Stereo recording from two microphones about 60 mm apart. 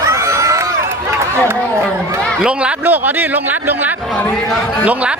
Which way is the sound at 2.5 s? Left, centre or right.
Centre.